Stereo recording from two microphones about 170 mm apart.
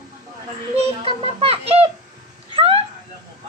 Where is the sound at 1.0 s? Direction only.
35° right (ahead or behind).